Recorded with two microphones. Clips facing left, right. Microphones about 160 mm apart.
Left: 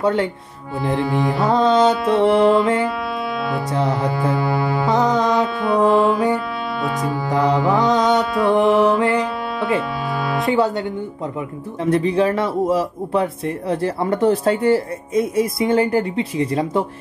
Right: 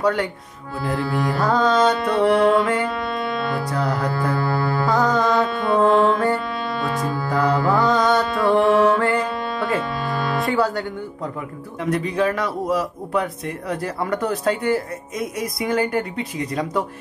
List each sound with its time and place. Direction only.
0.0 s speech: 25° left (ahead or behind)
1.8 s music: centre (ahead or behind)
3.7 s speech: 20° left (ahead or behind)
5.4 s music: centre (ahead or behind)
7.1 s speech: 20° left (ahead or behind)
8.2 s music: centre (ahead or behind)
10.5 s speech: 20° left (ahead or behind)